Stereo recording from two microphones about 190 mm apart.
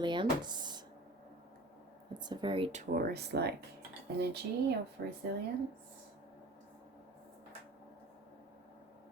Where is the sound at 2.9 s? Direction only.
55° right (ahead or behind).